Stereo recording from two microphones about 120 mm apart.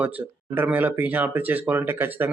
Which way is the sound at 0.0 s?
15° right (ahead or behind).